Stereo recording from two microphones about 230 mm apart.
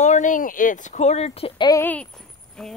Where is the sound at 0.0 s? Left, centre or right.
Left.